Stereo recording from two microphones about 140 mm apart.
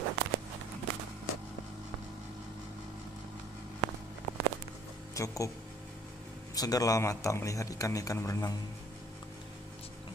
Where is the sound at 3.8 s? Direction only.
25° right (ahead or behind).